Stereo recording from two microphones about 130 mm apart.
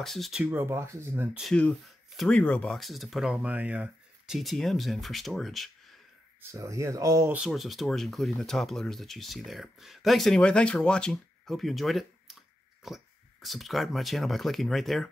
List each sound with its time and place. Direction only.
0.0 s speech: centre (ahead or behind)
0.5 s speech: 20° right (ahead or behind)
1.4 s speech: 5° left (ahead or behind)
6.4 s speech: 25° right (ahead or behind)
7.3 s speech: centre (ahead or behind)